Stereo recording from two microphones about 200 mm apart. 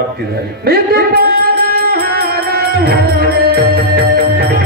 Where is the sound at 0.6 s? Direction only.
50° right (ahead or behind).